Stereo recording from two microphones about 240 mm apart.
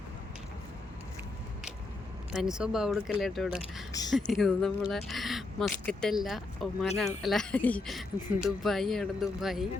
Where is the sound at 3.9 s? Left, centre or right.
Centre.